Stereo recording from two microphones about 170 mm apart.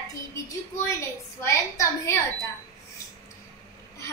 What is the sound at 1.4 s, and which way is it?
Speech, 15° left (ahead or behind).